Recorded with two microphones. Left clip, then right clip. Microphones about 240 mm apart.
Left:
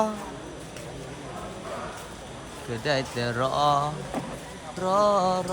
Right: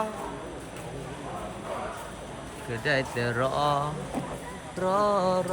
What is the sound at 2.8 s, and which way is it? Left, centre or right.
Speech, centre.